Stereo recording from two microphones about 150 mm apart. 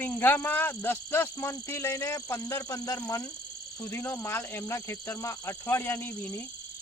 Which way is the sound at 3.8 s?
10° left (ahead or behind).